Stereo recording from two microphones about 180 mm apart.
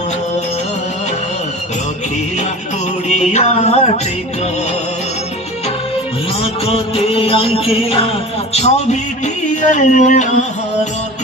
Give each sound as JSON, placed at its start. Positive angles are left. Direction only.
{"t": 3.1, "sound": "music", "side_deg": 40}
{"t": 6.4, "sound": "music", "side_deg": 30}